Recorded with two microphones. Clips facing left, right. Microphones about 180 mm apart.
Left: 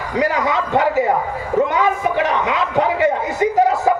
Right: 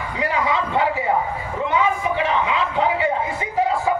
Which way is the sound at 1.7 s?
40° left (ahead or behind).